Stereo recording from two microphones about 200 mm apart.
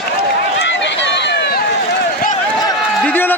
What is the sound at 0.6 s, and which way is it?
Run, 65° left (ahead or behind).